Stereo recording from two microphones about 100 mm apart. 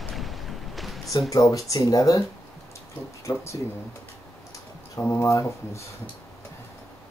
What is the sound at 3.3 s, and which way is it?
Speech, 45° left (ahead or behind).